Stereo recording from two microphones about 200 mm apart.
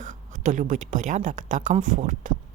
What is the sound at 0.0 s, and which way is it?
Speech, 40° right (ahead or behind).